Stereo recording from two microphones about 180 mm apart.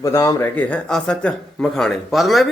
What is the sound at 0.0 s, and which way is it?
Speech, 15° left (ahead or behind).